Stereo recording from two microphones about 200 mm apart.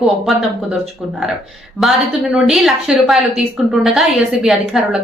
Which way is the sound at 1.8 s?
Centre (ahead or behind).